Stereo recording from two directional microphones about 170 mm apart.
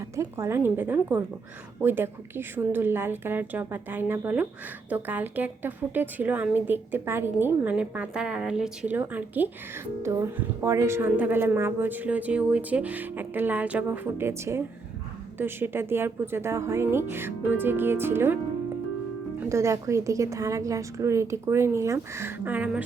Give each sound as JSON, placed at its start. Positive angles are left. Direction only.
{"t": 0.2, "sound": "a woman's voice", "side_deg": -15}
{"t": 19.4, "sound": "a woman's voice", "side_deg": -15}